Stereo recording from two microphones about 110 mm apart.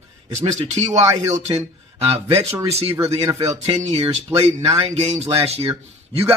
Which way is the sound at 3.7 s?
80° right.